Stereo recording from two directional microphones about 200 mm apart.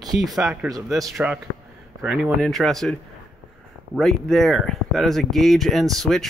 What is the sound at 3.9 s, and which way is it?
A man's voice, centre (ahead or behind).